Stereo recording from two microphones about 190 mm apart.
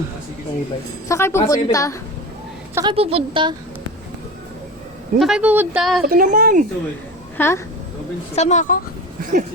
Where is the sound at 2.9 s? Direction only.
30° right (ahead or behind).